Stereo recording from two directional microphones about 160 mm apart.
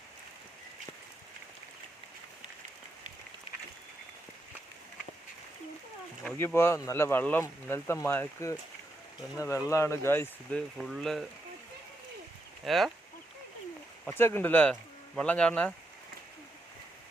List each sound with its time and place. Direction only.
6.4 s speech: 15° left (ahead or behind)
10.8 s speech: centre (ahead or behind)
12.6 s speech: centre (ahead or behind)
14.0 s speech: 15° left (ahead or behind)